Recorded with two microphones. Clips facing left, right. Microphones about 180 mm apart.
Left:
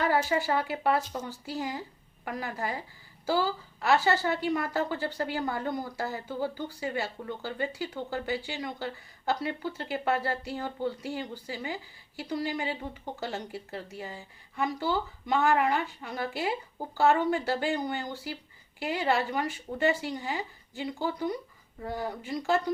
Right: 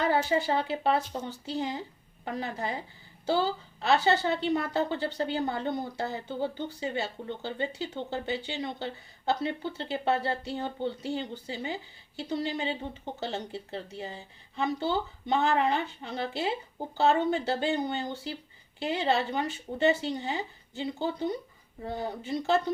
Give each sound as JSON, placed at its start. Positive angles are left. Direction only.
{"t": 0.0, "sound": "a woman's voice", "side_deg": -25}